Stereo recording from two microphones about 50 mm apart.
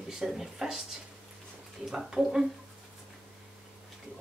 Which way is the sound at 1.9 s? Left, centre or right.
Centre.